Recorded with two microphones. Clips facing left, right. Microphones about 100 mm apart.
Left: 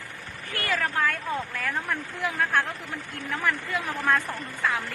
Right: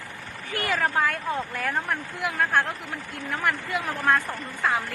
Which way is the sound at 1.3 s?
10° right (ahead or behind).